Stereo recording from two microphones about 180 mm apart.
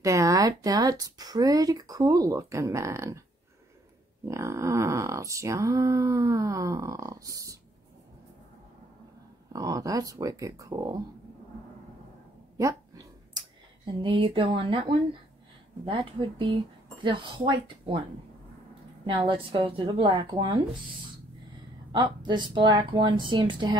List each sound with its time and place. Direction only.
0.0 s speech: 20° right (ahead or behind)
4.3 s speech: 15° right (ahead or behind)
9.5 s speech: 20° right (ahead or behind)
12.5 s dog: 20° right (ahead or behind)
14.0 s speech: 30° right (ahead or behind)
19.0 s speech: 25° right (ahead or behind)
21.9 s speech: 25° right (ahead or behind)